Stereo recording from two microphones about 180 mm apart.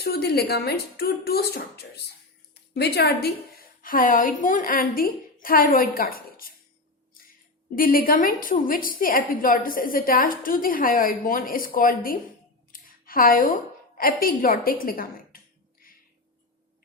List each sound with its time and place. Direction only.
0.0 s a woman's voice: 60° left (ahead or behind)
7.8 s a woman's voice: 50° left (ahead or behind)
12.7 s a sound: 50° left (ahead or behind)
14.0 s a woman's voice: 55° left (ahead or behind)